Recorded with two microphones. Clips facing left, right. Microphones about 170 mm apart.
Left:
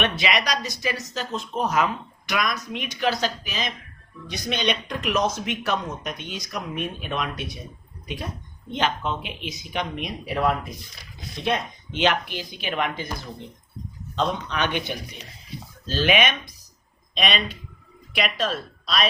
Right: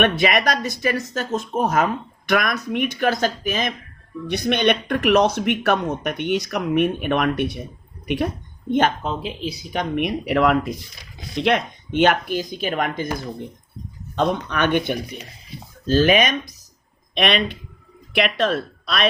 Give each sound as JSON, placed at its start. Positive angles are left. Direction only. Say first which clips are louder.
{"t": 0.0, "sound": "speech", "louder": "right 6 dB", "side_deg": -50}
{"t": 9.0, "sound": "speech", "louder": "right 3 dB", "side_deg": -35}
{"t": 9.9, "sound": "speech", "louder": "right 8 dB", "side_deg": -65}
{"t": 11.3, "sound": "speech", "louder": "right 6 dB", "side_deg": -75}
{"t": 11.9, "sound": "speech", "louder": "right 6 dB", "side_deg": -50}
{"t": 14.2, "sound": "speech", "louder": "right 4 dB", "side_deg": -55}
{"t": 17.2, "sound": "speech", "louder": "right 5 dB", "side_deg": -60}